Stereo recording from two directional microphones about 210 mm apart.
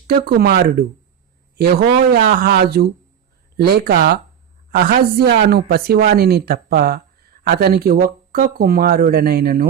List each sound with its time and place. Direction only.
0.1 s speech: 50° right (ahead or behind)
2.1 s speech: 45° right (ahead or behind)